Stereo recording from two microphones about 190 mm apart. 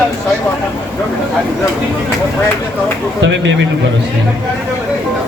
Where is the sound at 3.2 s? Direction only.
75° right (ahead or behind).